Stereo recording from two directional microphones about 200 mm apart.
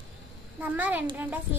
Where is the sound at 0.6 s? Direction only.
10° right (ahead or behind).